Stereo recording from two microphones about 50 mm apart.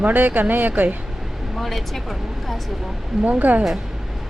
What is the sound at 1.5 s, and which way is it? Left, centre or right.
Speech, centre.